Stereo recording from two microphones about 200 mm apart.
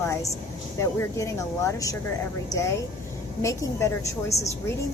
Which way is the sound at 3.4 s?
15° left (ahead or behind).